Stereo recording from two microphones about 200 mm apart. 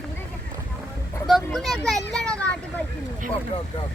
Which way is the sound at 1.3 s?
Centre (ahead or behind).